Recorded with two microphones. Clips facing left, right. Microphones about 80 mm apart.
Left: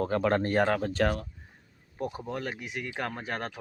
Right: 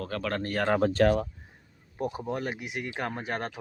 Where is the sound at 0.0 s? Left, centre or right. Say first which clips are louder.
Left 5 dB; left.